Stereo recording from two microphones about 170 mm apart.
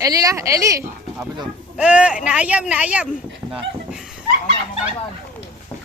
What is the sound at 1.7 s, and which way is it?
A woman's voice, 5° right (ahead or behind).